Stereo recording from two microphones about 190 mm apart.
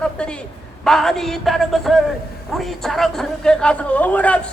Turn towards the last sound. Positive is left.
turn(degrees=5)  # may be behind; listen again after turning